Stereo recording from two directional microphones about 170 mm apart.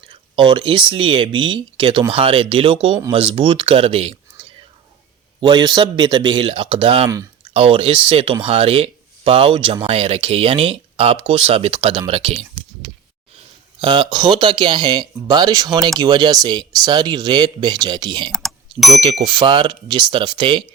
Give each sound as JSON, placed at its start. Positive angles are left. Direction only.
{"t": 0.1, "sound": "speech", "side_deg": -30}
{"t": 5.4, "sound": "speech", "side_deg": -25}
{"t": 13.8, "sound": "speech", "side_deg": -30}
{"t": 18.3, "sound": "speech", "side_deg": 5}
{"t": 19.2, "sound": "speech", "side_deg": -25}